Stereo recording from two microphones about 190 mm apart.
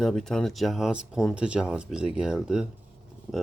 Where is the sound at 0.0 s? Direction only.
Centre (ahead or behind).